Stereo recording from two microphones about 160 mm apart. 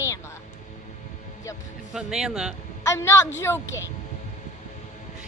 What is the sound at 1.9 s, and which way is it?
Speech, 5° right (ahead or behind).